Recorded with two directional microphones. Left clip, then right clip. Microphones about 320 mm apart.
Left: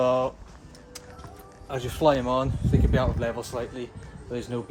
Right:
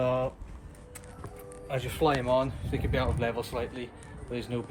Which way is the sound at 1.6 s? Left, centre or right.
Centre.